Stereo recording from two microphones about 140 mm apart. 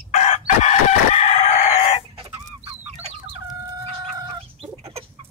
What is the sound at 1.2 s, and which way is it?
Crowing, 50° left (ahead or behind).